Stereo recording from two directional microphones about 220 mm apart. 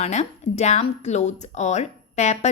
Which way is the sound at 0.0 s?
30° left (ahead or behind).